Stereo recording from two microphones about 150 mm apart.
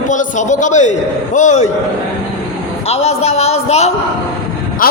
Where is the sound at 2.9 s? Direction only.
45° left (ahead or behind).